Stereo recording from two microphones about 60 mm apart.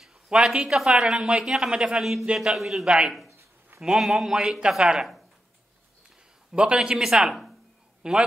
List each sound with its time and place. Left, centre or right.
0.0 s a man's voice: centre
3.3 s a sound: right
3.8 s a man's voice: centre
6.5 s a man's voice: centre